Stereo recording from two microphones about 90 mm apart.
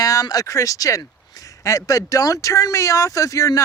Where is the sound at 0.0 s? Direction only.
40° left (ahead or behind).